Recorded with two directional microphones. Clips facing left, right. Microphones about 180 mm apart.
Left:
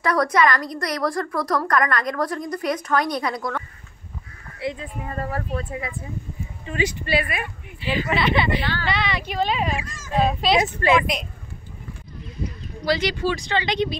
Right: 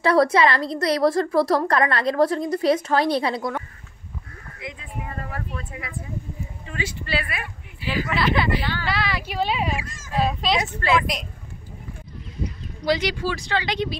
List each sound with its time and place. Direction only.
0.0 s a woman's voice: 30° right (ahead or behind)
4.6 s speech: 35° left (ahead or behind)
6.6 s speech: 20° left (ahead or behind)
7.8 s speech: 10° right (ahead or behind)
10.6 s speech: 20° left (ahead or behind)
11.0 s speech: centre (ahead or behind)
12.8 s speech: 15° right (ahead or behind)